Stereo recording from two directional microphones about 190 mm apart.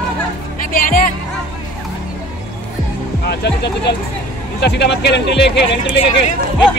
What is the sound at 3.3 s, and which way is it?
Speech, 60° left (ahead or behind).